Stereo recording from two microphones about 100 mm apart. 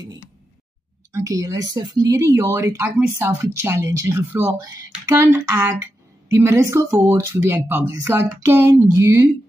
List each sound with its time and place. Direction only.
1.1 s speech: 30° right (ahead or behind)
3.0 s speech: 20° right (ahead or behind)
4.5 s speech: 35° right (ahead or behind)